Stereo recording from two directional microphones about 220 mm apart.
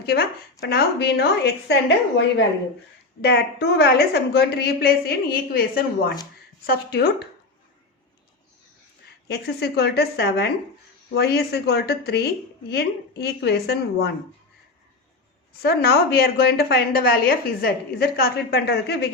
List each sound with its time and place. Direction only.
0.0 s a woman's voice: 45° left (ahead or behind)
9.3 s a woman's voice: 50° left (ahead or behind)
15.6 s a woman's voice: 45° left (ahead or behind)